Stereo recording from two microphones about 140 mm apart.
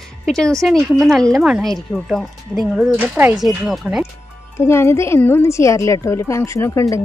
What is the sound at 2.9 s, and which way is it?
Speech, 15° right (ahead or behind).